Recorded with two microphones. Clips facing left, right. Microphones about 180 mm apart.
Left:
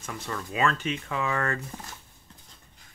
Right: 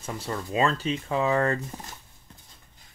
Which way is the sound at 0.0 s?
30° right (ahead or behind).